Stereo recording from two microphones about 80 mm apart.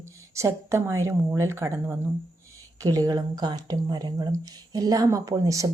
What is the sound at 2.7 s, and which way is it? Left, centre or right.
Speech, right.